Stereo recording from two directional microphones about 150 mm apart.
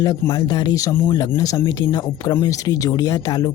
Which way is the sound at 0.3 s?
25° left (ahead or behind).